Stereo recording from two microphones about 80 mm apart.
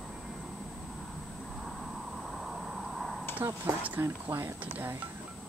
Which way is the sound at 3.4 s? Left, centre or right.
Right.